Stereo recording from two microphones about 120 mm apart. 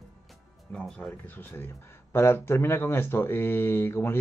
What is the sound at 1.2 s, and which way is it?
Speech, 15° left (ahead or behind).